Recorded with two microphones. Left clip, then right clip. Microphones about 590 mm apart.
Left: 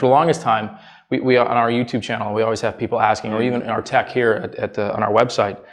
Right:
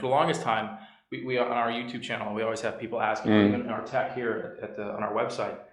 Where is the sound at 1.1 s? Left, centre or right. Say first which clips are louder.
Left 12 dB; left.